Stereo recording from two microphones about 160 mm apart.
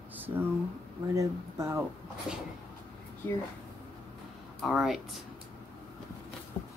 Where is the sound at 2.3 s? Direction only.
5° right (ahead or behind).